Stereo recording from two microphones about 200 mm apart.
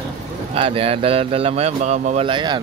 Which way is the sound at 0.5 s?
25° right (ahead or behind).